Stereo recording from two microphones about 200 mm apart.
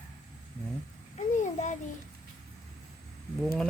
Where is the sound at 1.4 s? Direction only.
35° left (ahead or behind).